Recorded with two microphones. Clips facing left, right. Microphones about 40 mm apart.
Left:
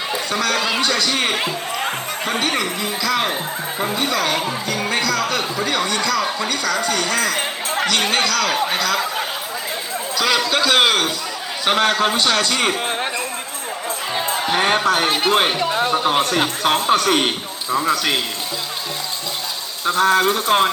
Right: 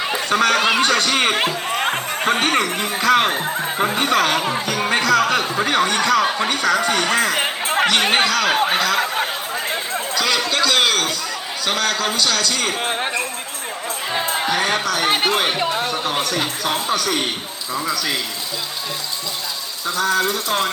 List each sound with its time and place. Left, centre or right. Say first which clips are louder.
0.3 s speech: right 5 dB; right
7.7 s chatter: right 3 dB; right
7.9 s speech: right 2 dB; right
8.7 s speech: right 1 dB; centre
10.2 s a man's voice: left 2 dB; centre
11.6 s a man's voice: left 4 dB; left
12.8 s speech: even; centre
14.5 s a man's voice: left 6 dB; left
19.9 s a man's voice: left 4 dB; left